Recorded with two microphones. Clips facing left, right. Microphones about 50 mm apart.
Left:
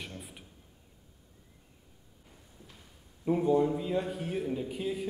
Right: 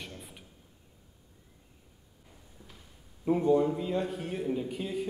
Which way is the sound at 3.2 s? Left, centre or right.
Centre.